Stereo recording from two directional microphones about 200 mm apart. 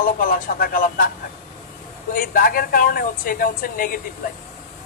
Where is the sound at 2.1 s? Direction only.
45° left (ahead or behind).